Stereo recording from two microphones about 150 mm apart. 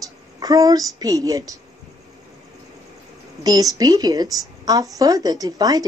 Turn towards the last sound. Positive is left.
turn(degrees=-25)  # may be behind; listen again after turning